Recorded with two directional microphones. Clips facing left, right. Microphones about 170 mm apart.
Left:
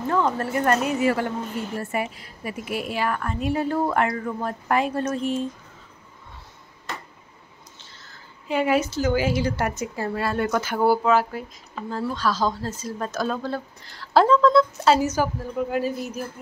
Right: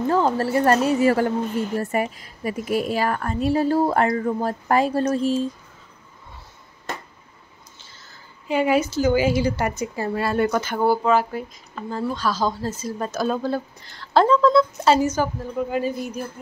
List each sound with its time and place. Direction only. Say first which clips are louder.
0.1 s a woman's voice: right 2 dB; 30° right (ahead or behind)
8.0 s speech: even; centre (ahead or behind)